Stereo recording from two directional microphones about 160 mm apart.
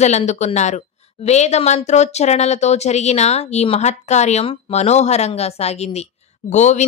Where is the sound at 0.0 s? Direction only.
45° left (ahead or behind).